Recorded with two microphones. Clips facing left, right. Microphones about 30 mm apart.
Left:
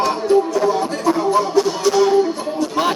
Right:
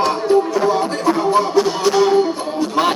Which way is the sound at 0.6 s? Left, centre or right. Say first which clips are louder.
Right 1 dB; right.